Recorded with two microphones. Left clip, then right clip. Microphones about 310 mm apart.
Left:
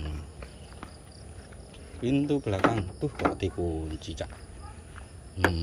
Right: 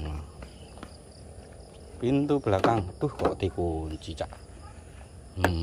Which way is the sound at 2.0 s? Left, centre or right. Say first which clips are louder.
Right 2 dB; centre.